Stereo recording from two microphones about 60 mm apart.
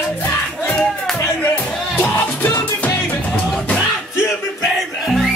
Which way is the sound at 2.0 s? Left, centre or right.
Left.